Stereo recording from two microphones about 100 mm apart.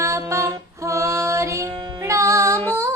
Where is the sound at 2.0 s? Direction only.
30° right (ahead or behind).